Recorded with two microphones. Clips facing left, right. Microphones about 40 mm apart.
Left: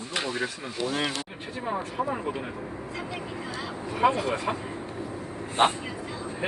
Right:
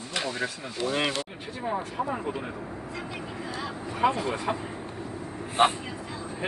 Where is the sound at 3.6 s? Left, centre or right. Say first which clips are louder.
Left 2 dB; centre.